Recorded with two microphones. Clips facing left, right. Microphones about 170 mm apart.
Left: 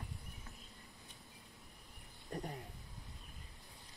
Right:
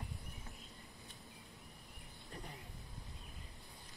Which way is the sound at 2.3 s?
45° left (ahead or behind).